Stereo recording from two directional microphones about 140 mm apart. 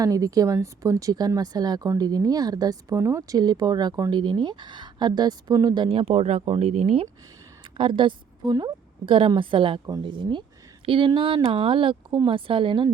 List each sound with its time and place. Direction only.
0.0 s a woman's voice: 25° right (ahead or behind)